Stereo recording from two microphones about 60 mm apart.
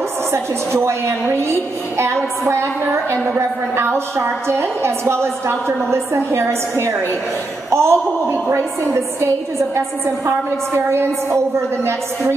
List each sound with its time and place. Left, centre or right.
0.3 s a woman's voice: right
2.4 s a woman's voice: right